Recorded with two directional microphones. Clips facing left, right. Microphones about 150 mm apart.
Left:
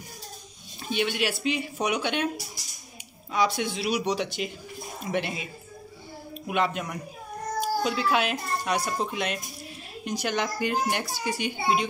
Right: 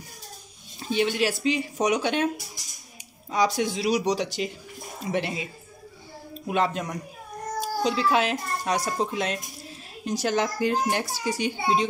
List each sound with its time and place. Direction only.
0.8 s a child's voice: 35° right (ahead or behind)
3.3 s a child's voice: 40° right (ahead or behind)
5.0 s a child's voice: 30° right (ahead or behind)